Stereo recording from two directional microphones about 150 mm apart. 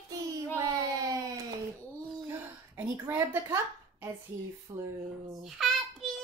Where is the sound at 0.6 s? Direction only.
20° right (ahead or behind).